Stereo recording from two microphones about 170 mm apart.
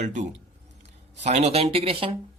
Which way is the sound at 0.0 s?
45° right (ahead or behind).